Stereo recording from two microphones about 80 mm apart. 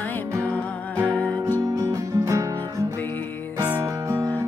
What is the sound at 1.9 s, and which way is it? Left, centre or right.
Music, right.